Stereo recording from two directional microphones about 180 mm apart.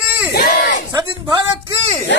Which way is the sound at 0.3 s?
55° left (ahead or behind).